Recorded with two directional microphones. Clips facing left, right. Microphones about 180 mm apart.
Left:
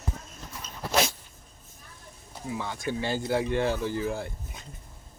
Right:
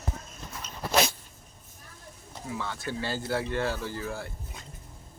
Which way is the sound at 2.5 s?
15° left (ahead or behind).